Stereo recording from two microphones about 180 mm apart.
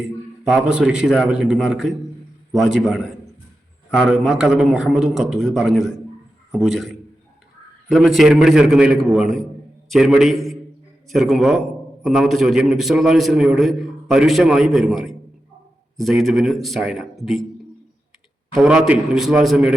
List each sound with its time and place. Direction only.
0.4 s a man's voice: 5° right (ahead or behind)
18.5 s a man's voice: centre (ahead or behind)